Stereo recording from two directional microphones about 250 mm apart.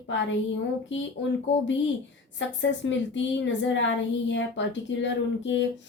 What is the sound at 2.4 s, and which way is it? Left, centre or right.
Speech, left.